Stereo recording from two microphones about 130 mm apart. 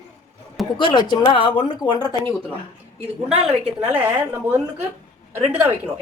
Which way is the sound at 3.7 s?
10° right (ahead or behind).